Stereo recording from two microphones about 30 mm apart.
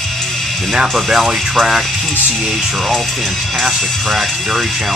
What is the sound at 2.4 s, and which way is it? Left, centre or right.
Speech, centre.